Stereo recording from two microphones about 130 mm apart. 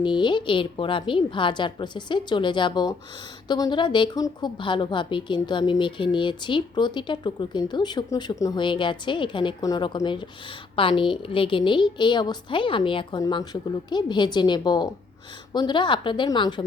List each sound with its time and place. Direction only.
0.0 s a woman's voice: 35° left (ahead or behind)